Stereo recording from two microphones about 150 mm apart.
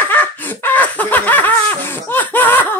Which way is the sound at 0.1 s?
10° left (ahead or behind).